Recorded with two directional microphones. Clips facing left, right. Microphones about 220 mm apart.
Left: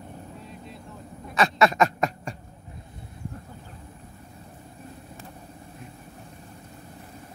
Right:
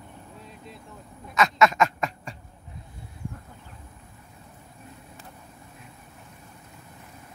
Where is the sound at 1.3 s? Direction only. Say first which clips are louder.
Even; 35° left (ahead or behind).